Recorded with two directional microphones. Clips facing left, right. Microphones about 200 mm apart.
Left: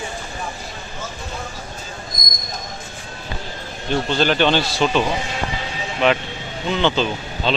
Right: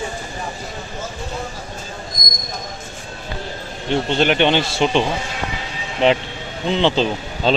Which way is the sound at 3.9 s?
20° right (ahead or behind).